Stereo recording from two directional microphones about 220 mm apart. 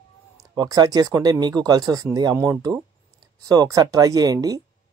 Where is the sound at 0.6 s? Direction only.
15° right (ahead or behind).